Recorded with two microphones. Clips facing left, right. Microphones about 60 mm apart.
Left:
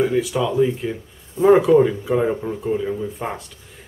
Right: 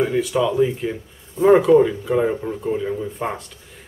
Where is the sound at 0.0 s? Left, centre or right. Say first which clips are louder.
Even; centre.